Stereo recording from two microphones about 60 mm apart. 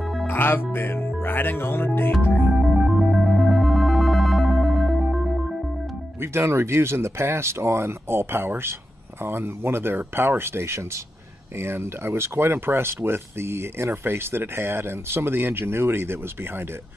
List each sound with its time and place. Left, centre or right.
0.3 s speech: left
2.6 s music: centre
6.2 s speech: right